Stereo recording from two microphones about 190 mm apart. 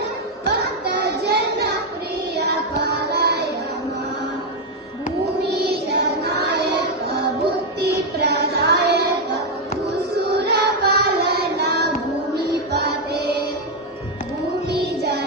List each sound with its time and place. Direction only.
1.0 s a sound: 60° right (ahead or behind)
2.3 s music: 60° right (ahead or behind)
5.4 s music: 60° right (ahead or behind)
10.2 s child singing: 55° right (ahead or behind)
12.4 s music: 55° right (ahead or behind)
14.7 s music: 60° right (ahead or behind)